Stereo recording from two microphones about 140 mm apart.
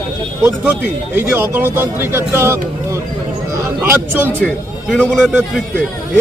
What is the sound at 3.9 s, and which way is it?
Speech, 15° right (ahead or behind).